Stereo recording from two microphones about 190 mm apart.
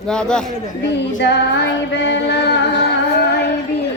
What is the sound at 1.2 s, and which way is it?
Female singing, 65° left (ahead or behind).